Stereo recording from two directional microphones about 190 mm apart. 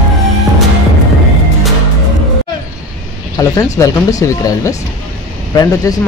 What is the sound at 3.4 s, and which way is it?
Speech, 20° left (ahead or behind).